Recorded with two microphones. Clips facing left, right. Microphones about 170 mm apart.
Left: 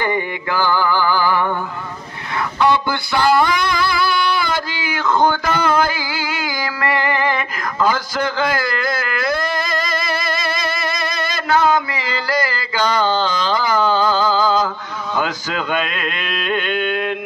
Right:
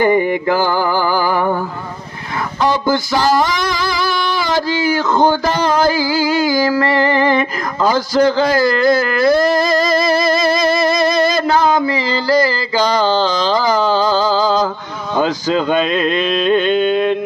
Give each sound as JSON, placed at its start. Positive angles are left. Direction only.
{"t": 0.0, "sound": "music", "side_deg": -45}
{"t": 4.6, "sound": "music", "side_deg": -40}